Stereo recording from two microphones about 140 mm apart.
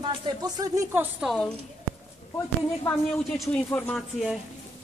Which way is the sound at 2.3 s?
20° left (ahead or behind).